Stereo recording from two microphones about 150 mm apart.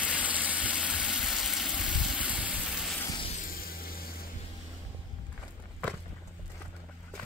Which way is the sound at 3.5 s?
80° left.